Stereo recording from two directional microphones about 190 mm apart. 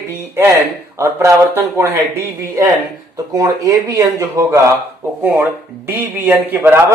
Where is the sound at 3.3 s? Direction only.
20° right (ahead or behind).